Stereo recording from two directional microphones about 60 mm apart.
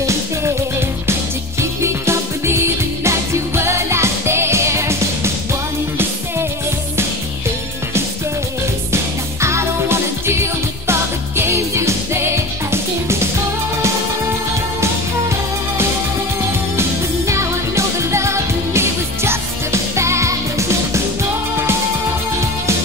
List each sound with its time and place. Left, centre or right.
0.0 s music: right
8.9 s music: right
17.3 s music: right